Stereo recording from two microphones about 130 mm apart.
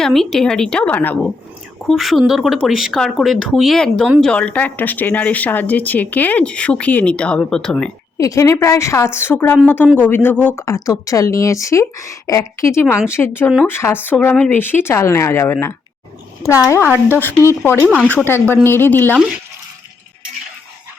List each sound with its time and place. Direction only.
0.0 s speech: 5° left (ahead or behind)
1.9 s speech: centre (ahead or behind)
8.2 s speech: 25° left (ahead or behind)